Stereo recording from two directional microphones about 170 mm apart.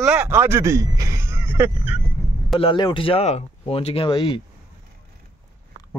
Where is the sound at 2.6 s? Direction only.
30° left (ahead or behind).